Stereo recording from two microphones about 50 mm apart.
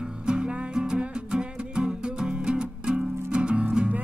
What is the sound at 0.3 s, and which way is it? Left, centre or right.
Music, centre.